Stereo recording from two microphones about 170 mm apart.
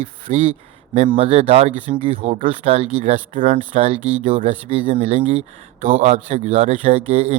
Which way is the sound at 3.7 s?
35° right (ahead or behind).